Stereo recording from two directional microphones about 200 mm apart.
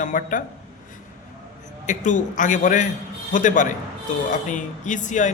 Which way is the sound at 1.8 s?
40° left (ahead or behind).